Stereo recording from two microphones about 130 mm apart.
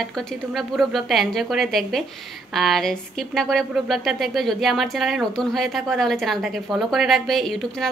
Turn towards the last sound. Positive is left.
turn(degrees=0)  # may be behind; listen again after turning